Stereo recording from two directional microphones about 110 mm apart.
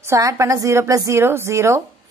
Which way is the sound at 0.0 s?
30° right (ahead or behind).